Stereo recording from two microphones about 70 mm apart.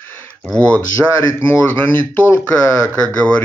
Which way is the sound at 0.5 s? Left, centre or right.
Right.